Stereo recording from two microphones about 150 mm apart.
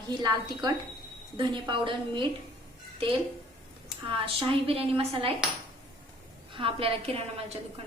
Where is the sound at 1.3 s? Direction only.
35° right (ahead or behind).